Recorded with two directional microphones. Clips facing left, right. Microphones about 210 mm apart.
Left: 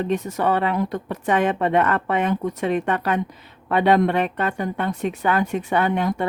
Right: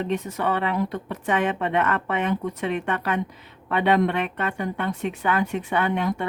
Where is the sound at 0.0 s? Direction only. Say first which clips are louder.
Left 3 dB; 45° left (ahead or behind).